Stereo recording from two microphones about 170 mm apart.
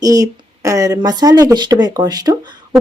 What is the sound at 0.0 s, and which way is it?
Speech, 20° right (ahead or behind).